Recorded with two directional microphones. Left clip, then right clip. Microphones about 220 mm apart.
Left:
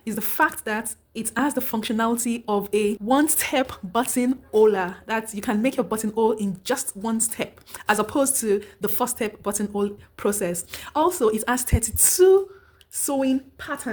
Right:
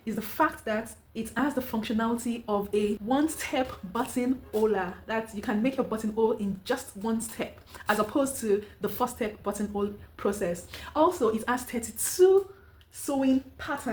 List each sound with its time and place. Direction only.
0.0 s a woman's voice: 50° left (ahead or behind)